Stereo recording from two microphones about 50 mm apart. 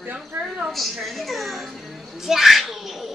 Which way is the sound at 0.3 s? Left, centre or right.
Right.